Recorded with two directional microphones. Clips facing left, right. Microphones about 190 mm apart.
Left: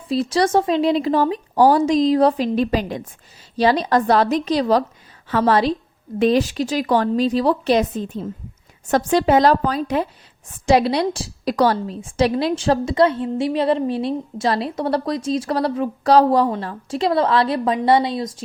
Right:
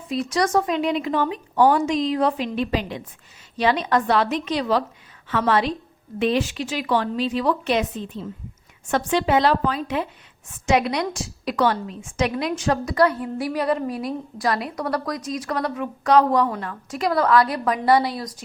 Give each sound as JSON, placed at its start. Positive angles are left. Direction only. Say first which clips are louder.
{"t": 0.1, "sound": "a woman's voice", "louder": "left 4 dB", "side_deg": 30}